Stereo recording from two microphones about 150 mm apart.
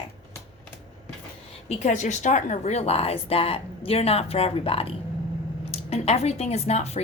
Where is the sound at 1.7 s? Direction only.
50° left (ahead or behind).